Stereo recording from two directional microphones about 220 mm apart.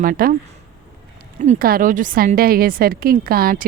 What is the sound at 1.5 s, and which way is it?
A woman's voice, 40° right (ahead or behind).